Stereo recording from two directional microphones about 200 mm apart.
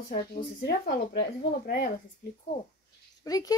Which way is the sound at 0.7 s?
55° left (ahead or behind).